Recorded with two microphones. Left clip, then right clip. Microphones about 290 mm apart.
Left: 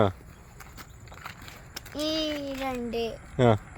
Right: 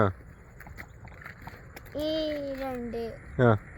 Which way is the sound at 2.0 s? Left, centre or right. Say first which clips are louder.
Even; left.